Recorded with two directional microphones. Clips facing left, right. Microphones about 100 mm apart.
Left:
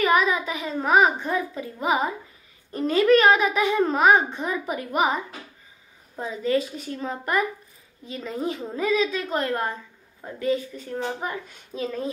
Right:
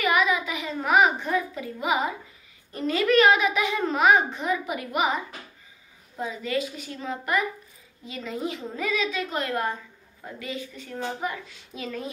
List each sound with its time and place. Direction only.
0.0 s child singing: 35° left (ahead or behind)
0.7 s a child's voice: 35° left (ahead or behind)
6.1 s a child's voice: 35° left (ahead or behind)